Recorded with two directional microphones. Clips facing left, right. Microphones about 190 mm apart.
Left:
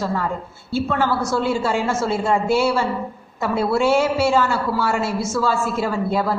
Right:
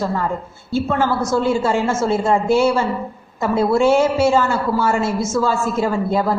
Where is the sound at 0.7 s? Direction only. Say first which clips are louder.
Right 2 dB; 45° right (ahead or behind).